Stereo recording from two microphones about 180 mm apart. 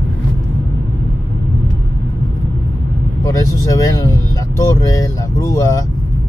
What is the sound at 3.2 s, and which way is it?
Speech, 20° left (ahead or behind).